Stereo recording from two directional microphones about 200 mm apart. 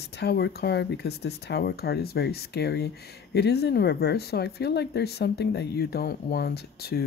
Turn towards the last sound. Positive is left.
turn(degrees=50)  # may be behind; listen again after turning